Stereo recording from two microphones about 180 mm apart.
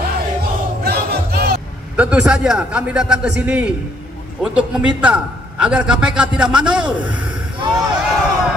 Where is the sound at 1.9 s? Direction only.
5° right (ahead or behind).